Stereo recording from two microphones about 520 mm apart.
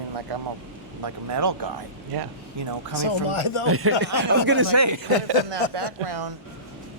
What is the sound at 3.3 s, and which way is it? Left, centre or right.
Speech, left.